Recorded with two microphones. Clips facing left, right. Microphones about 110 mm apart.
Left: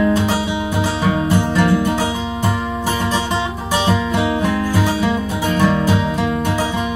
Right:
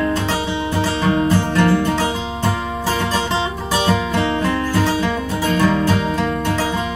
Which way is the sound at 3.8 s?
15° left (ahead or behind).